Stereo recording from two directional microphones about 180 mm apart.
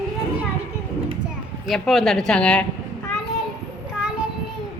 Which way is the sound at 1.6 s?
Centre (ahead or behind).